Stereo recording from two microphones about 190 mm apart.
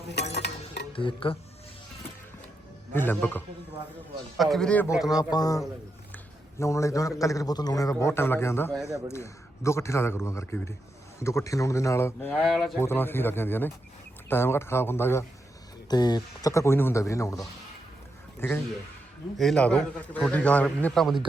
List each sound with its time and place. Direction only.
0.1 s stir: 65° left (ahead or behind)
0.9 s a man's voice: 25° left (ahead or behind)
2.9 s a man's voice: 10° left (ahead or behind)
5.1 s a man's voice: 20° left (ahead or behind)
12.5 s a man's voice: centre (ahead or behind)
12.8 s a man's voice: 10° left (ahead or behind)